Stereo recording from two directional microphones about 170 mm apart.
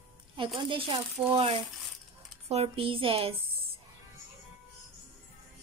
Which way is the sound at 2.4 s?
35° right (ahead or behind).